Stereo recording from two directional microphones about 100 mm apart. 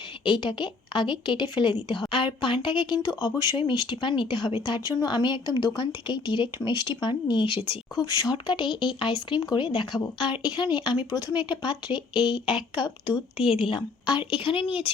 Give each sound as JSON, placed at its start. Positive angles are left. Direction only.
{"t": 0.3, "sound": "a woman's voice", "side_deg": 50}
{"t": 3.6, "sound": "a woman's voice", "side_deg": 50}
{"t": 8.0, "sound": "a woman's voice", "side_deg": 40}
{"t": 13.3, "sound": "speech", "side_deg": -5}
{"t": 13.6, "sound": "a woman's voice", "side_deg": 55}